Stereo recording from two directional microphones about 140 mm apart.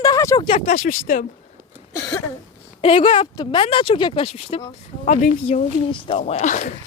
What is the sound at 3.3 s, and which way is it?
Speech, 35° left (ahead or behind).